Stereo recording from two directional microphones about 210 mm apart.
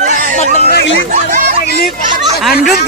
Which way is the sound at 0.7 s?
50° left (ahead or behind).